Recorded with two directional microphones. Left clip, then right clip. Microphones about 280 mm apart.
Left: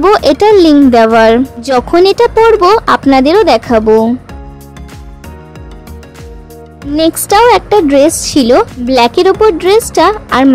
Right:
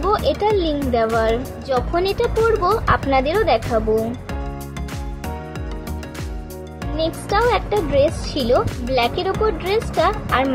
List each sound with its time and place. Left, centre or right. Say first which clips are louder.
0.0 s speech: left 12 dB; left
7.0 s speech: left 12 dB; left